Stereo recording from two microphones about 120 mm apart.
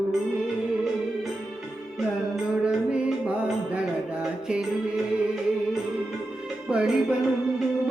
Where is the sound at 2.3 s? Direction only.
5° right (ahead or behind).